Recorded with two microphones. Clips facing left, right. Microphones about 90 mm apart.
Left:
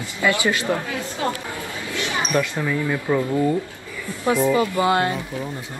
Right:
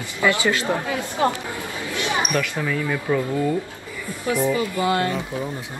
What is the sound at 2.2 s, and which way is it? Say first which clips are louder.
Speech: left 2 dB; 20° left (ahead or behind).